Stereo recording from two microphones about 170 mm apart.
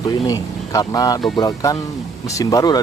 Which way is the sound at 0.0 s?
20° left (ahead or behind).